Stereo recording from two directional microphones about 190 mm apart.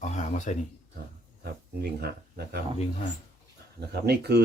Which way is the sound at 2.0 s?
55° right (ahead or behind).